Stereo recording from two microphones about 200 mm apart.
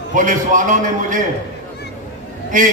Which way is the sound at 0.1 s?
40° right (ahead or behind).